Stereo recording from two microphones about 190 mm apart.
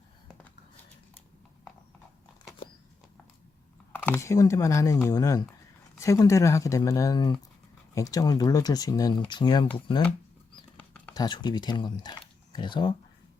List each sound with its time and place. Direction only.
3.9 s speech: 10° left (ahead or behind)
10.8 s a sound: 10° left (ahead or behind)
11.1 s speech: 20° left (ahead or behind)